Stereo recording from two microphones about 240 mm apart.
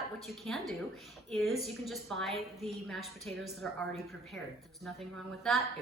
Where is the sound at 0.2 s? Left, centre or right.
Centre.